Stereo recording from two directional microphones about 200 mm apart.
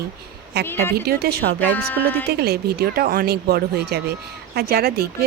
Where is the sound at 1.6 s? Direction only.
10° left (ahead or behind).